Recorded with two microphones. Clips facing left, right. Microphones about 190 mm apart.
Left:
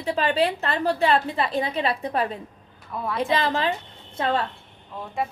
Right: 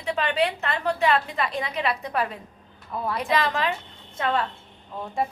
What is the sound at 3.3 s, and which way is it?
Speech, 30° left (ahead or behind).